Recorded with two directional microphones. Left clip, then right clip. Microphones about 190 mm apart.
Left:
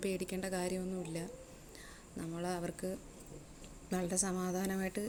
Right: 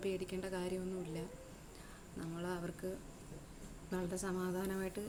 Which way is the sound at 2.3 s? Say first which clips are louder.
Left 4 dB; 25° left (ahead or behind).